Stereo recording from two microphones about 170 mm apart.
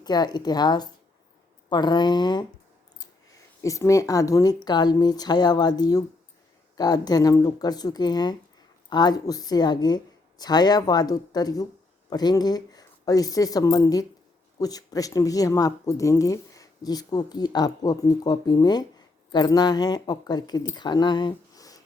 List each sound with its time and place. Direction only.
0.0 s speech: 25° left (ahead or behind)
3.6 s speech: 20° left (ahead or behind)